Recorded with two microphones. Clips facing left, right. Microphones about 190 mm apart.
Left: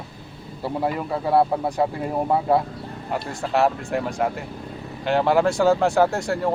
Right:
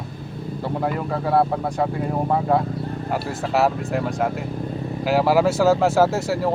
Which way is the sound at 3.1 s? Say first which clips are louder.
Even; centre (ahead or behind).